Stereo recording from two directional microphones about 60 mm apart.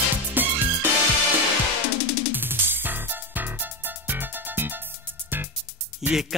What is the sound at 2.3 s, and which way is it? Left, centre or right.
Music, right.